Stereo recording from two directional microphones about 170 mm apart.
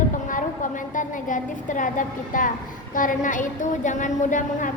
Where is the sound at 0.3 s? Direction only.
50° left (ahead or behind).